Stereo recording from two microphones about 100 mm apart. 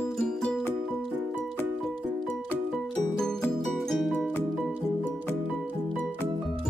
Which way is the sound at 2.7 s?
5° left (ahead or behind).